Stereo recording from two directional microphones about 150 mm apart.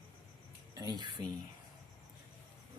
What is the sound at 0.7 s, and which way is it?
Speech, 30° right (ahead or behind).